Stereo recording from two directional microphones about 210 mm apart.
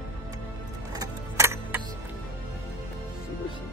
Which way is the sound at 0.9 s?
15° right (ahead or behind).